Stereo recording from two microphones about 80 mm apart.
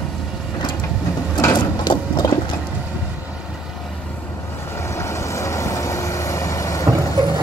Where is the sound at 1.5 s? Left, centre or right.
Left.